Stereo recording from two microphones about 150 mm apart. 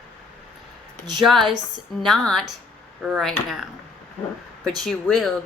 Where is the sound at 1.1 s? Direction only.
Centre (ahead or behind).